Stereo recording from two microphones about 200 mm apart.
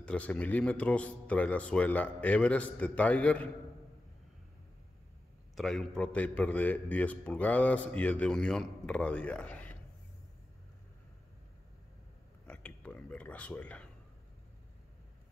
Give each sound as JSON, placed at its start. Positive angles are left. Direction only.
{"t": 0.0, "sound": "a man's voice", "side_deg": 5}
{"t": 5.6, "sound": "a man's voice", "side_deg": 5}
{"t": 12.4, "sound": "a sound", "side_deg": 5}